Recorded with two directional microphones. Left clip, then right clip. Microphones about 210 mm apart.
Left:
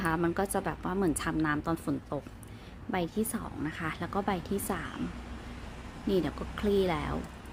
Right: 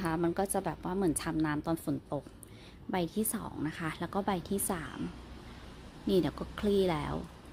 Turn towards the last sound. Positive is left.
turn(degrees=-20)  # may be behind; listen again after turning